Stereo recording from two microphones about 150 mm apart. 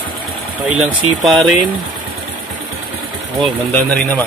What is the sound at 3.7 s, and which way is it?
Speech, 10° left (ahead or behind).